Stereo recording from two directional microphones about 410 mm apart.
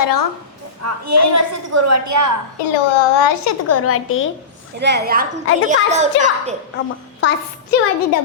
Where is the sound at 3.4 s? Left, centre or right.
Left.